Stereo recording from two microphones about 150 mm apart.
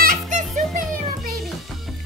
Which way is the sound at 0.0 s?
65° right (ahead or behind).